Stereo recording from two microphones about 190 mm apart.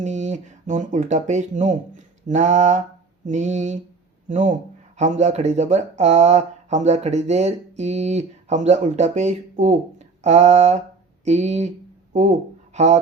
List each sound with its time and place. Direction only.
0.0 s speech: 40° right (ahead or behind)
12.7 s speech: 35° right (ahead or behind)